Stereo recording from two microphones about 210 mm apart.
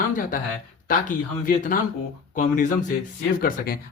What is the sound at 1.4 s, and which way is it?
Speech, 40° left (ahead or behind).